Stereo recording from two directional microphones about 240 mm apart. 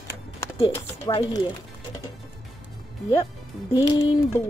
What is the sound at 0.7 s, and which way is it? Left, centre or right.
Speech, centre.